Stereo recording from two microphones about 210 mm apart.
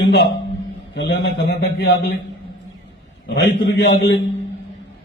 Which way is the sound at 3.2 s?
55° left (ahead or behind).